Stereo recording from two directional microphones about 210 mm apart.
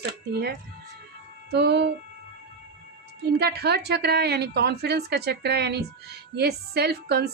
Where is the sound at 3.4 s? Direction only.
50° right (ahead or behind).